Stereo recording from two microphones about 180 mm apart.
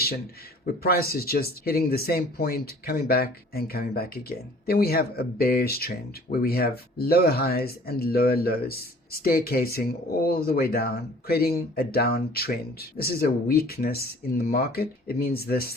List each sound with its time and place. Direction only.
0.6 s speech: 55° left (ahead or behind)